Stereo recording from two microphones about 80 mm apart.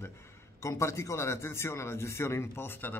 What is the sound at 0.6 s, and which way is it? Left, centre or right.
A man's voice, left.